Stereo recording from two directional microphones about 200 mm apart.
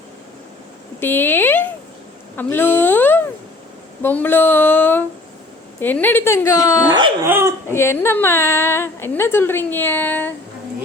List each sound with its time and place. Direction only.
0.9 s a sound: 10° left (ahead or behind)
4.0 s a woman's voice: 10° left (ahead or behind)
6.9 s speech: 20° right (ahead or behind)
7.3 s speech: 10° right (ahead or behind)
7.7 s a woman's voice: 15° left (ahead or behind)